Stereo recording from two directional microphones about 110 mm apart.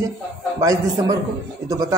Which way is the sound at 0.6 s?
30° right (ahead or behind).